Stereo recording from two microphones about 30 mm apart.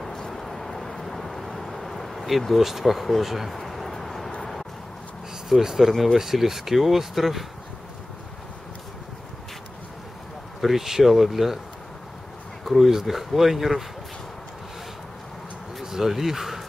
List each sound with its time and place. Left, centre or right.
0.3 s vehicle: centre
3.2 s speech: centre
3.5 s a sound: centre
5.8 s speech: centre
10.6 s speech: centre
12.6 s speech: centre
15.8 s a sound: centre
16.1 s speech: centre